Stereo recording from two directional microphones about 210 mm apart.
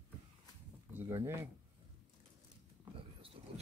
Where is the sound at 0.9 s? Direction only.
10° right (ahead or behind).